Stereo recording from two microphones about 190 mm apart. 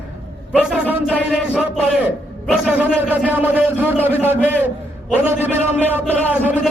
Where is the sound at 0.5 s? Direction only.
5° right (ahead or behind).